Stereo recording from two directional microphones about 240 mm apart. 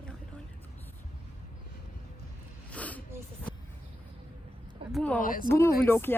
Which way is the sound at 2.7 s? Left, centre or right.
Centre.